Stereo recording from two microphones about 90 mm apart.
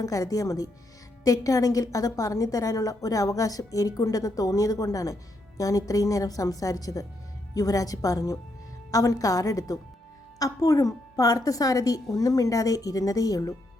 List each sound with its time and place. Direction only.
0.0 s a woman's voice: 40° left (ahead or behind)